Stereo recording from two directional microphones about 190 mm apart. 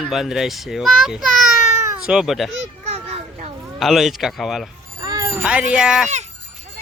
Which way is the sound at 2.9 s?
30° right (ahead or behind).